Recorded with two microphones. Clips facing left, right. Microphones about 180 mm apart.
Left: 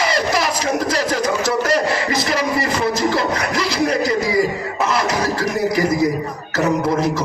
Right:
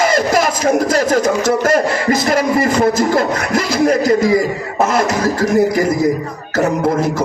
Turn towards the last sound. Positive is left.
turn(degrees=-50)  # may be behind; listen again after turning